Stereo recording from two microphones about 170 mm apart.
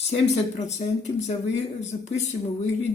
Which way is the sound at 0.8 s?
40° left (ahead or behind).